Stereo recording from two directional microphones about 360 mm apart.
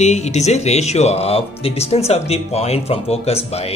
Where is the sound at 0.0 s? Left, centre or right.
Centre.